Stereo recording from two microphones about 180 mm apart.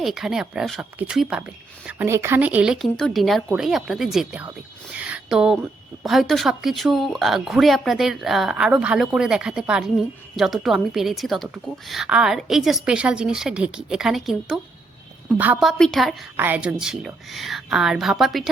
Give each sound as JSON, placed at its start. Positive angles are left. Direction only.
{"t": 0.0, "sound": "a woman's voice", "side_deg": 0}
{"t": 4.9, "sound": "a sound", "side_deg": -5}
{"t": 6.1, "sound": "a woman's voice", "side_deg": 0}
{"t": 15.8, "sound": "a woman's voice", "side_deg": 0}